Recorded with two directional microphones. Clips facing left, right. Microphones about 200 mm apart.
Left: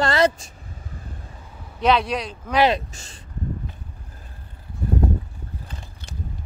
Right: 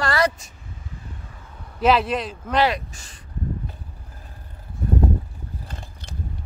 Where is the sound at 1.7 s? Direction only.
5° right (ahead or behind).